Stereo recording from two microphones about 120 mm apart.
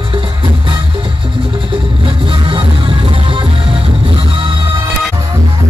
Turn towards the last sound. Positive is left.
turn(degrees=-45)  # may be behind; listen again after turning